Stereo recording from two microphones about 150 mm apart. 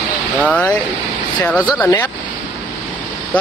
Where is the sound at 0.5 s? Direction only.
10° left (ahead or behind).